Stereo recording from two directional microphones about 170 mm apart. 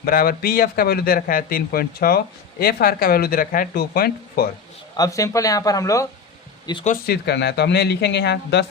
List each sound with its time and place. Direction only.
0.0 s a man's voice: 60° left (ahead or behind)
4.9 s speech: 20° left (ahead or behind)
6.8 s speech: 60° left (ahead or behind); by 8.6 s 85° left